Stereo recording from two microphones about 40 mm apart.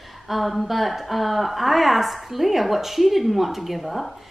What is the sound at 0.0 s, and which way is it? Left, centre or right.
A woman's voice, centre.